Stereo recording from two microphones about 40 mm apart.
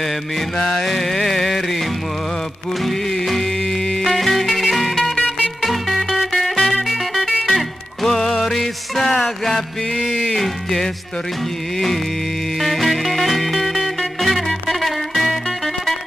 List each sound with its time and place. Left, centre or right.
0.6 s music: centre
10.4 s music: centre
12.5 s music: centre